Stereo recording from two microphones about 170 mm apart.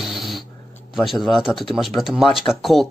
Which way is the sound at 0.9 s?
Centre (ahead or behind).